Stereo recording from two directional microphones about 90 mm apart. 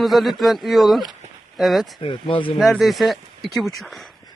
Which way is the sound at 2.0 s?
70° left (ahead or behind).